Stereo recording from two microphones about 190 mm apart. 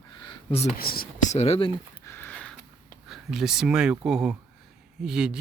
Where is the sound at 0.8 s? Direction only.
50° left (ahead or behind).